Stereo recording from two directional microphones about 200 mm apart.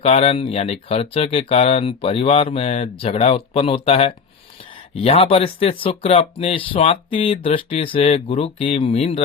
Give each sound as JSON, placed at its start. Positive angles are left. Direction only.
{"t": 0.0, "sound": "speech", "side_deg": 30}